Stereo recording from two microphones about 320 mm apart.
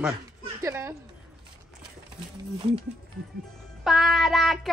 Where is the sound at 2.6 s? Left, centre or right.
Centre.